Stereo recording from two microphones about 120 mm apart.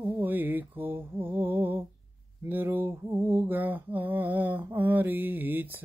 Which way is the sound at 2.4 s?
20° right (ahead or behind).